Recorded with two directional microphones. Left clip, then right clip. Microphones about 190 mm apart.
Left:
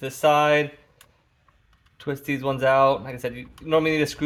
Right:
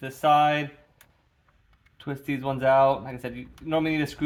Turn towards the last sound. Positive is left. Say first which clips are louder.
# left 5 dB
turn(degrees=35)  # may be behind; listen again after turning